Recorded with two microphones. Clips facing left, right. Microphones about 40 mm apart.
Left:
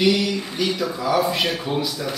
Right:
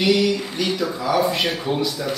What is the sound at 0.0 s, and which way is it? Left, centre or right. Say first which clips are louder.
Speech: right 1 dB; centre.